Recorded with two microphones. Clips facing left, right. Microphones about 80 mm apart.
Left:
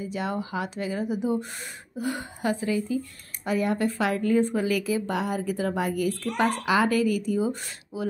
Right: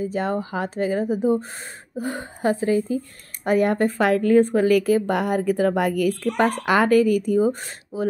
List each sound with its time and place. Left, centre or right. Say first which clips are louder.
0.0 s speech: right 6 dB; right
3.4 s a woman's voice: right 6 dB; right